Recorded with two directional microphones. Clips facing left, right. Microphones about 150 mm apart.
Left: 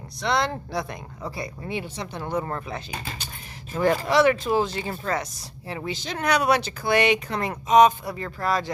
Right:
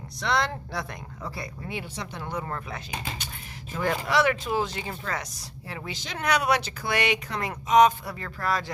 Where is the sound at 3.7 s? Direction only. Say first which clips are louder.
Left 5 dB; 30° left (ahead or behind).